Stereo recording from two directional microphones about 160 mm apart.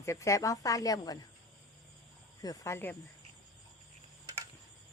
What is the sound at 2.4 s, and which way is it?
Speech, 20° left (ahead or behind).